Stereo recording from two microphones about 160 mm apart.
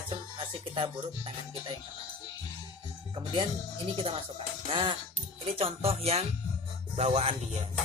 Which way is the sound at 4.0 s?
35° right (ahead or behind).